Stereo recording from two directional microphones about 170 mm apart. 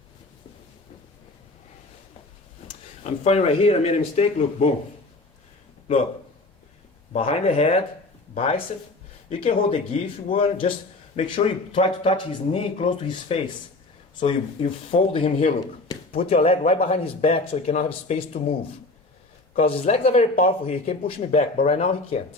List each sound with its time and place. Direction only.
2.6 s speech: 40° left (ahead or behind)
7.1 s speech: 35° left (ahead or behind)
9.4 s speech: 30° left (ahead or behind)
19.6 s speech: 35° left (ahead or behind)